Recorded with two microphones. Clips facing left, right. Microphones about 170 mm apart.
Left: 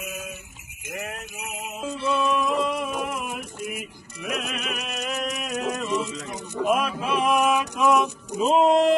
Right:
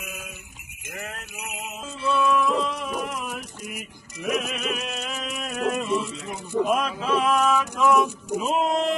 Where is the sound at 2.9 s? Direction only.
50° left (ahead or behind).